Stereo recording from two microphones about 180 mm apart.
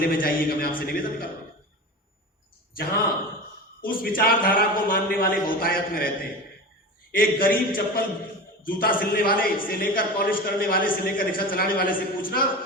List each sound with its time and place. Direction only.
0.0 s a man's voice: 55° left (ahead or behind)
2.7 s a man's voice: 55° left (ahead or behind)
7.1 s a man's voice: 55° left (ahead or behind)